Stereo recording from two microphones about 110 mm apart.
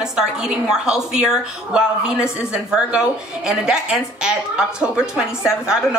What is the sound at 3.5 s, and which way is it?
Speech, 5° right (ahead or behind).